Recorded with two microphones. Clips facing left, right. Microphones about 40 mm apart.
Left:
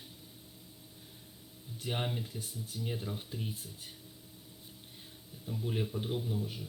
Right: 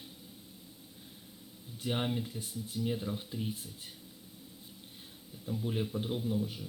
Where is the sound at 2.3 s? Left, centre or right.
Right.